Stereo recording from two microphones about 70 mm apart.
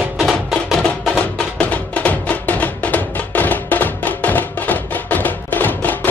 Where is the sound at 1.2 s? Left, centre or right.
Left.